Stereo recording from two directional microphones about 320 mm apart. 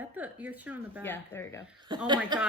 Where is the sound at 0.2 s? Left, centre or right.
Centre.